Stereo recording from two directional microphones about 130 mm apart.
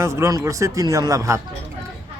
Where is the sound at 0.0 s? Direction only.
20° right (ahead or behind).